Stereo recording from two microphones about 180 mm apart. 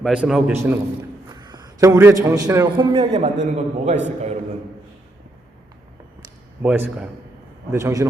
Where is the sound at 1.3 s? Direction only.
25° right (ahead or behind).